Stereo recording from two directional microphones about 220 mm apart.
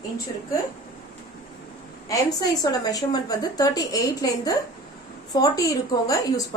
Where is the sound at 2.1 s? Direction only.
15° left (ahead or behind).